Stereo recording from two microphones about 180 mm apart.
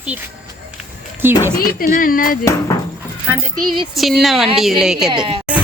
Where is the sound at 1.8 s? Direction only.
50° left (ahead or behind).